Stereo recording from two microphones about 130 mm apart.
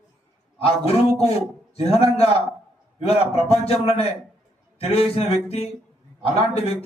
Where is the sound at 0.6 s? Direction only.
50° left (ahead or behind).